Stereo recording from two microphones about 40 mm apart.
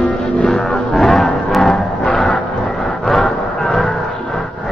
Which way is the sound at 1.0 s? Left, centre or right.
Centre.